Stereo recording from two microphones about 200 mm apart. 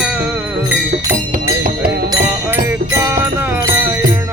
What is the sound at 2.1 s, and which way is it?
Music, 10° right (ahead or behind).